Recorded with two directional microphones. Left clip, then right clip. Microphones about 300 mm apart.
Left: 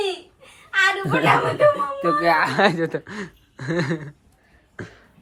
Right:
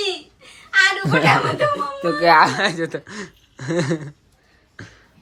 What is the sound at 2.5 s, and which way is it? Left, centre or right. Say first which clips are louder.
Speech: left 2 dB; centre.